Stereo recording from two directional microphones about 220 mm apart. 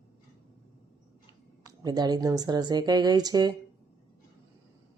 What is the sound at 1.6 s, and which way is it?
A woman's voice, 20° right (ahead or behind).